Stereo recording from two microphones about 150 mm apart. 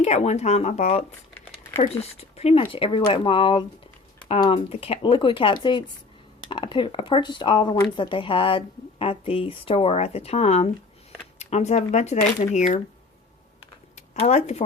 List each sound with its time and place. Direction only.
0.0 s speech: 45° left (ahead or behind)
2.1 s a woman's voice: 45° left (ahead or behind)
13.9 s a sound: 50° left (ahead or behind)